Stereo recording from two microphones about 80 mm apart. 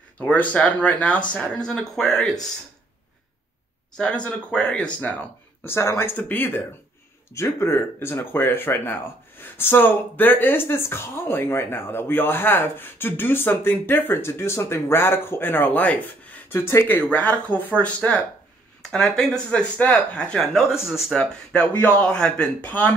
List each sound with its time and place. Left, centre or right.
0.2 s speech: centre
3.9 s speech: centre
5.6 s speech: left
7.3 s speech: left; by 21.6 s centre
21.7 s speech: left
22.1 s speech: centre